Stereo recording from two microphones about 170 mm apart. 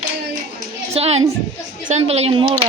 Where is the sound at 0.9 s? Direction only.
35° right (ahead or behind).